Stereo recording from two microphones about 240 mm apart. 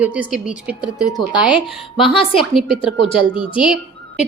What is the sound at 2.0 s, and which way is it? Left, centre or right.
A woman's voice, left.